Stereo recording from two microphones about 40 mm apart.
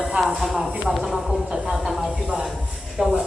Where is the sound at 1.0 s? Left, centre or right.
Centre.